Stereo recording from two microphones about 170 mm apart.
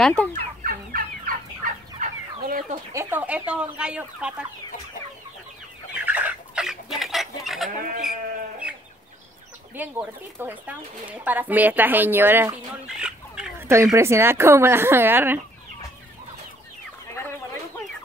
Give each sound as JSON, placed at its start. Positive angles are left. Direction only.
{"t": 0.0, "sound": "fowl", "side_deg": 5}
{"t": 0.3, "sound": "fowl", "side_deg": -55}
{"t": 2.9, "sound": "speech", "side_deg": -15}
{"t": 6.0, "sound": "chicken", "side_deg": -10}
{"t": 9.8, "sound": "speech", "side_deg": -10}
{"t": 13.9, "sound": "speech", "side_deg": -15}
{"t": 17.1, "sound": "chicken", "side_deg": 15}